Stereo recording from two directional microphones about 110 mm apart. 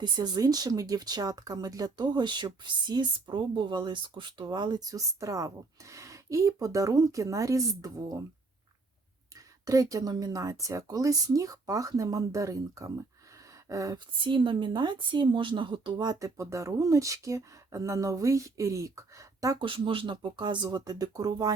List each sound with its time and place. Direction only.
0.0 s speech: 35° right (ahead or behind)
9.6 s speech: 30° right (ahead or behind)
14.3 s speech: 50° right (ahead or behind); by 19.5 s 30° right (ahead or behind)
19.5 s speech: 50° right (ahead or behind)